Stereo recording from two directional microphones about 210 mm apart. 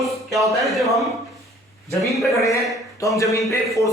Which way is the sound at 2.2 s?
Centre (ahead or behind).